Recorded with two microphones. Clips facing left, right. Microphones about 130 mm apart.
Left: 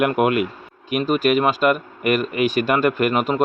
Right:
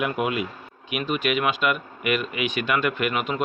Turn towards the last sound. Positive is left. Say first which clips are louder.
# left 6 dB
turn(degrees=45)  # may be behind; listen again after turning